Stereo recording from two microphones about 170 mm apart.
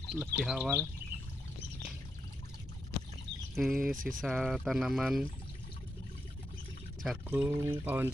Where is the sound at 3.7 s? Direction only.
55° right (ahead or behind).